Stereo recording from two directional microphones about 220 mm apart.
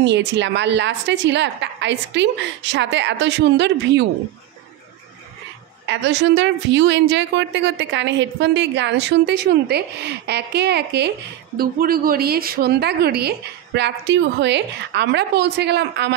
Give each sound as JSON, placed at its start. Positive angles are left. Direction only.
{"t": 0.0, "sound": "a woman's voice", "side_deg": -55}
{"t": 5.9, "sound": "a woman's voice", "side_deg": -50}